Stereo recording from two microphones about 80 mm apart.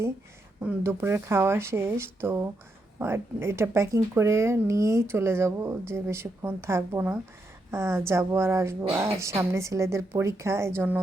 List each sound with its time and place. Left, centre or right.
0.8 s a woman's voice: right